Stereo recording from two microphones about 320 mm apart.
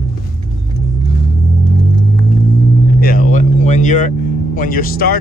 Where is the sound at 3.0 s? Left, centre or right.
Left.